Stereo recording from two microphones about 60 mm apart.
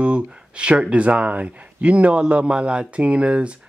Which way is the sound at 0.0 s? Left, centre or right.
Right.